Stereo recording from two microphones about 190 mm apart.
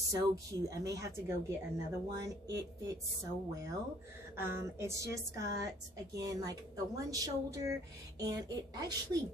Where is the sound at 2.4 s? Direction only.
20° right (ahead or behind).